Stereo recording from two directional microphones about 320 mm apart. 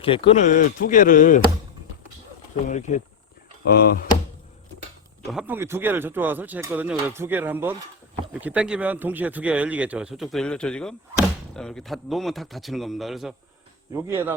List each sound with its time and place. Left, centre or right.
0.0 s speech: centre
2.6 s speech: left
5.3 s speech: centre